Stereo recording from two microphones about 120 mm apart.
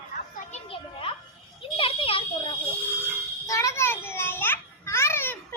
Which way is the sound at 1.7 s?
50° left (ahead or behind).